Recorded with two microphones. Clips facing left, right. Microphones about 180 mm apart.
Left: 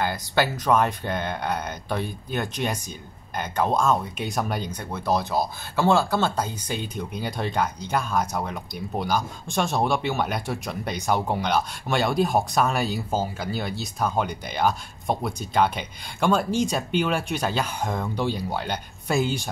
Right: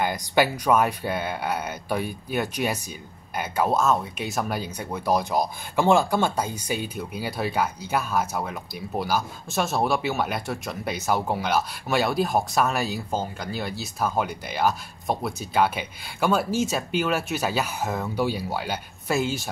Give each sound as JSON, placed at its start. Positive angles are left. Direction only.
{"t": 0.0, "sound": "speech", "side_deg": -15}